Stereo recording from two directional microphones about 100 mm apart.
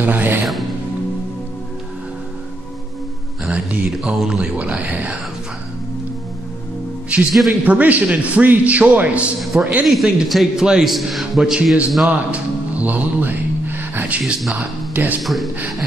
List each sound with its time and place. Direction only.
0.0 s music: 20° right (ahead or behind)
3.4 s speech: 10° right (ahead or behind)
7.1 s speech: 10° right (ahead or behind)
9.4 s a man's voice: centre (ahead or behind)
12.1 s music: 15° right (ahead or behind)
14.5 s speech: 15° right (ahead or behind)
15.2 s a man's voice: centre (ahead or behind)